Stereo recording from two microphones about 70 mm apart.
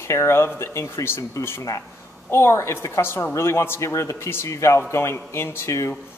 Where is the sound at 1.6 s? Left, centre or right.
Left.